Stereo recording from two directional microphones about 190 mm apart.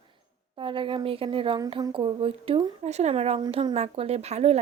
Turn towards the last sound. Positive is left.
turn(degrees=-35)  # may be behind; listen again after turning